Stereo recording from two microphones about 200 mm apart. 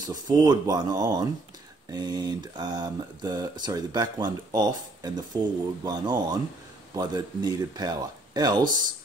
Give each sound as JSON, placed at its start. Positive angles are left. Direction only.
{"t": 0.0, "sound": "speech", "side_deg": -20}